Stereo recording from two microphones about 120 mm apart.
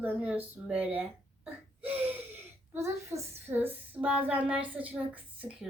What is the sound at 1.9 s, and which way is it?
Gasp, 15° right (ahead or behind).